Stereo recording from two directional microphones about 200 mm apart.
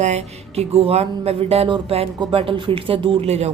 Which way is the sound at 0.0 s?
35° right (ahead or behind).